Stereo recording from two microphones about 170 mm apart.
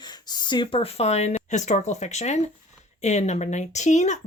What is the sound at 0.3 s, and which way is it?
A woman's voice, 25° left (ahead or behind).